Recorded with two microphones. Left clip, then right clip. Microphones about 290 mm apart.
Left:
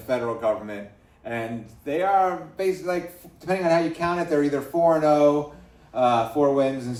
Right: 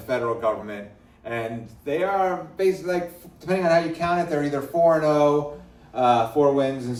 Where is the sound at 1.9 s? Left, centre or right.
Left.